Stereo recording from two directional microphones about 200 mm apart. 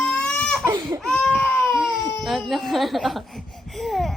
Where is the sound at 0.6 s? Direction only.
20° right (ahead or behind).